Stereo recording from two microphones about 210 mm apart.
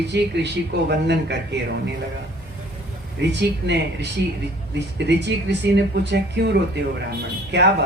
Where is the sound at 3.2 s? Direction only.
55° right (ahead or behind).